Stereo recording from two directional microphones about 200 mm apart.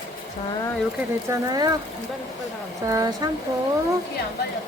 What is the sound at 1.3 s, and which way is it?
Speech, 20° right (ahead or behind).